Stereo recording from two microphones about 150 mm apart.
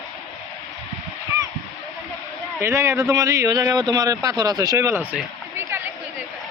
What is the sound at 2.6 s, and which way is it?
Speech, 20° right (ahead or behind).